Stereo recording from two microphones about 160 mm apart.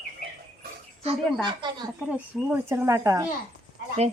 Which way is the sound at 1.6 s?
30° right (ahead or behind).